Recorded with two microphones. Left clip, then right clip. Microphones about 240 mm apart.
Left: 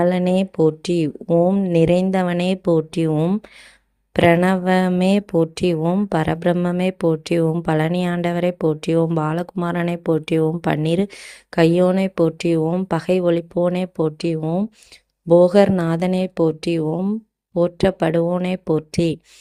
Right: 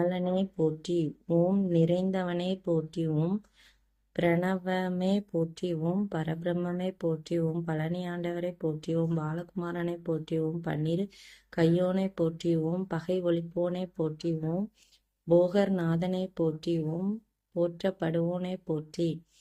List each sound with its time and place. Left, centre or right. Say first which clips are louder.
0.0 s speech: left 11 dB; left